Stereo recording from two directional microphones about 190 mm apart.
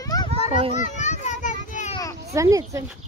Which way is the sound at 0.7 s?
40° left (ahead or behind).